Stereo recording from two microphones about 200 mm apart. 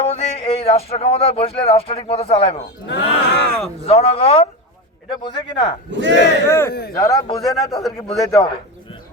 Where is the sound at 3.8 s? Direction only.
30° left (ahead or behind).